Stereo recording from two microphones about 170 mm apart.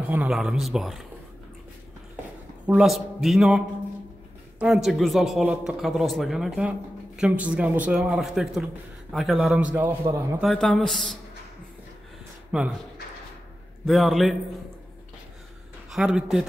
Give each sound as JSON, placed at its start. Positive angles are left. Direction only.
{"t": 0.1, "sound": "speech", "side_deg": -5}
{"t": 2.6, "sound": "a man's voice", "side_deg": -5}
{"t": 10.5, "sound": "speech", "side_deg": 5}
{"t": 12.5, "sound": "speech", "side_deg": -5}
{"t": 13.8, "sound": "speech", "side_deg": 0}
{"t": 15.9, "sound": "speech", "side_deg": -5}